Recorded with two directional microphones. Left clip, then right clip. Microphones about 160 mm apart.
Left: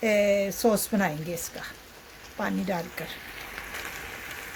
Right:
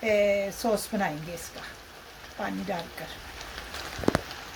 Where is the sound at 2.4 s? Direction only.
70° left (ahead or behind).